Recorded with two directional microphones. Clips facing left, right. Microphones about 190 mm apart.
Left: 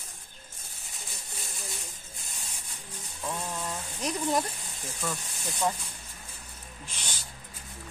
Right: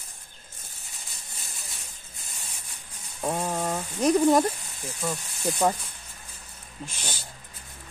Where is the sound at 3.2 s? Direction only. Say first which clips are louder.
Right 7 dB; 60° right (ahead or behind).